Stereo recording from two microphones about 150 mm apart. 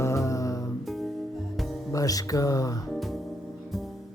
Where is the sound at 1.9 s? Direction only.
25° left (ahead or behind).